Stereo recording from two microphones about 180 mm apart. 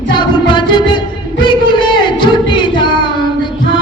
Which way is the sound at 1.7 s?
25° left (ahead or behind).